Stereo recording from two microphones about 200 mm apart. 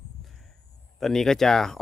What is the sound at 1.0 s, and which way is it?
Speech, centre (ahead or behind).